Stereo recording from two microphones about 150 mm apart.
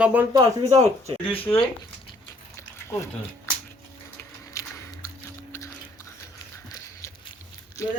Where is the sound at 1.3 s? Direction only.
40° left (ahead or behind).